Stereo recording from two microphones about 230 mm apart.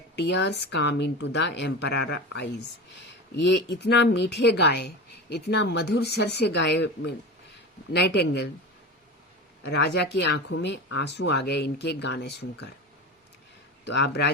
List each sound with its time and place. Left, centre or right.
0.2 s speech: left
9.6 s speech: left
13.8 s speech: left